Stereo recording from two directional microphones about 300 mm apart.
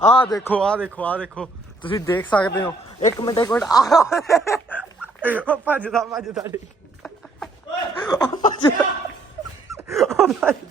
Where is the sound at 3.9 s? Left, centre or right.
Centre.